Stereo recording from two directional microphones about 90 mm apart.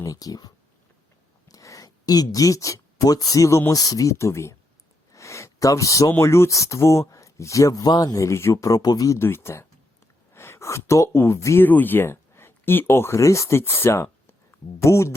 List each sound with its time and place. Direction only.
0.0 s speech: 40° left (ahead or behind)
5.1 s a sound: 35° left (ahead or behind)
6.1 s speech: 30° left (ahead or behind); by 9.1 s 45° left (ahead or behind)
9.1 s speech: 30° left (ahead or behind)